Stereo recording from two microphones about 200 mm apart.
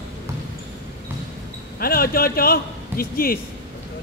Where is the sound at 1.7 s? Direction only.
50° left (ahead or behind).